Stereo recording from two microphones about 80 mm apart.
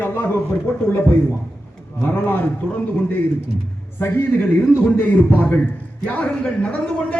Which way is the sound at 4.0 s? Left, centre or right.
Left.